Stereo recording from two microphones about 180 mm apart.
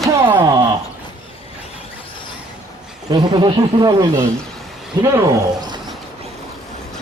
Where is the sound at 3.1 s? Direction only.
25° right (ahead or behind).